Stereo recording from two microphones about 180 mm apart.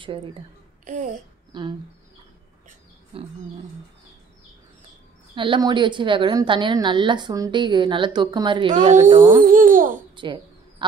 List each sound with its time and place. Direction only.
0.0 s a woman's voice: 30° right (ahead or behind)
0.8 s a child's voice: 45° right (ahead or behind)
1.5 s speech: 25° right (ahead or behind)
3.1 s a sound: 35° right (ahead or behind)
5.3 s a woman's voice: 25° right (ahead or behind)
9.4 s a child's voice: 50° right (ahead or behind)
10.1 s a sound: 25° right (ahead or behind)